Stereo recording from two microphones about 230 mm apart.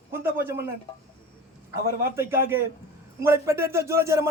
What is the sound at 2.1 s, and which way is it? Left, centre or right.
A man's voice, centre.